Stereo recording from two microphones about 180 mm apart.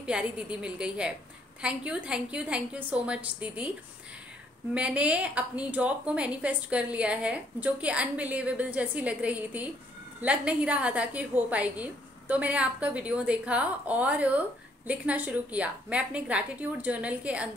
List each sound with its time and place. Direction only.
0.0 s a woman's voice: 5° right (ahead or behind)
4.7 s a woman's voice: 5° right (ahead or behind)